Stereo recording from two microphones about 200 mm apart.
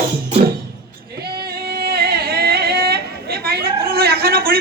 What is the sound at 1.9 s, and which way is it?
Singing, 50° right (ahead or behind).